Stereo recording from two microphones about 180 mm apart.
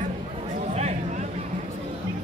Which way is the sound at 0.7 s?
40° right (ahead or behind).